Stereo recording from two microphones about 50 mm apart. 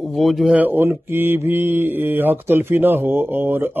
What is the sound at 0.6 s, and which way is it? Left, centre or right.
Speech, right.